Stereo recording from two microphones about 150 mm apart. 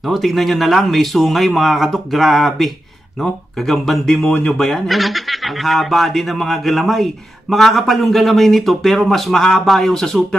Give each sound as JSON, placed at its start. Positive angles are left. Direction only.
{"t": 0.1, "sound": "speech", "side_deg": 0}